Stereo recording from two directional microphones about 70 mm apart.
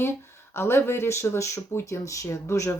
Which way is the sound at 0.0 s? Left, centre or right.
Left.